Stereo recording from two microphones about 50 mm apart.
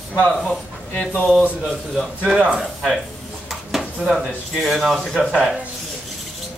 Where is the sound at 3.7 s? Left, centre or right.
Centre.